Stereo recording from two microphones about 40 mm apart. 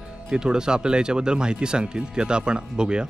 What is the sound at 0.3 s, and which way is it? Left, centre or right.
Speech, centre.